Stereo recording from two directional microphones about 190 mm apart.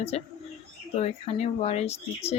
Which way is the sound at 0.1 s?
35° left (ahead or behind).